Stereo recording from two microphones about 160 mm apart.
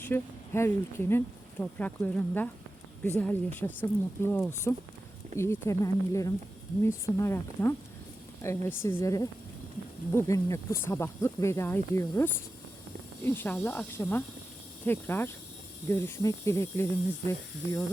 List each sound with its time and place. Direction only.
0.0 s speech: 15° left (ahead or behind)